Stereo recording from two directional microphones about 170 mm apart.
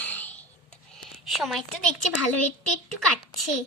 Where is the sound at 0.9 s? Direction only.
Centre (ahead or behind).